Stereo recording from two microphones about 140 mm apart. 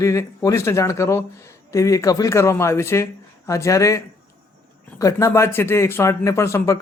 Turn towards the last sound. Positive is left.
turn(degrees=20)  # may be behind; listen again after turning